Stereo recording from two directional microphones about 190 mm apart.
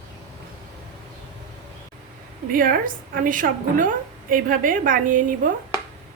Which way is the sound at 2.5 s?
45° right (ahead or behind).